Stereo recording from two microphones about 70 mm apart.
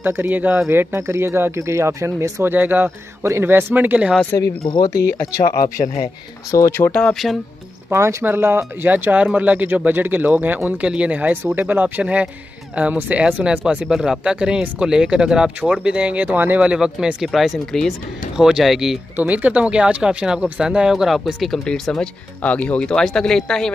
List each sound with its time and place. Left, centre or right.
0.0 s speech: right
0.7 s speech: right
2.4 s speech: right
4.3 s speech: left
6.9 s speech: centre
7.9 s speech: right; by 13.8 s centre
13.8 s speech: centre; by 16.6 s right
16.6 s speech: centre
19.1 s speech: right; by 22.1 s centre
22.4 s speech: centre